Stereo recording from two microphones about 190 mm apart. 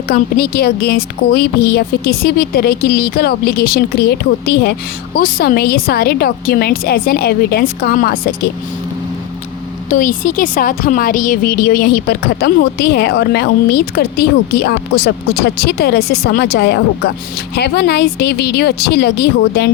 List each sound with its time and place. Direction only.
0.1 s a woman's voice: 55° left (ahead or behind)
9.9 s a woman's voice: 45° left (ahead or behind)